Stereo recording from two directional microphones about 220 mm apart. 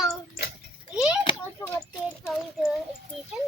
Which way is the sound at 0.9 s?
5° right (ahead or behind).